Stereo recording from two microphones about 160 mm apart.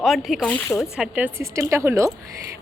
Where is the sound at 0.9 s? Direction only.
5° right (ahead or behind).